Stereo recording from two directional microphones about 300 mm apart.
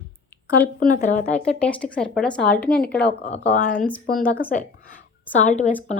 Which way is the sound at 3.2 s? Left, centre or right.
Left.